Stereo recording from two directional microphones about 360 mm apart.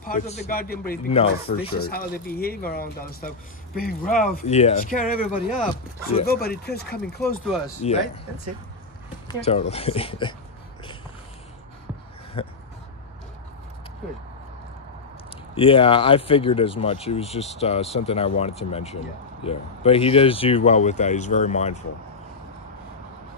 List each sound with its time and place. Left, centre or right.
0.0 s speech: left
7.0 s speech: centre
9.3 s speech: centre
12.4 s a sound: centre
15.5 s speech: centre